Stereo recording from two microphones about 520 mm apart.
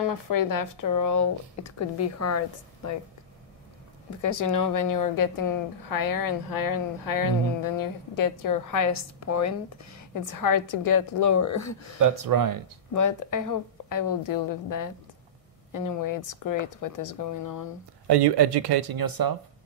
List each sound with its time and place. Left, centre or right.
0.0 s speech: left
4.2 s speech: left
12.0 s speech: right
12.9 s speech: left
18.0 s speech: right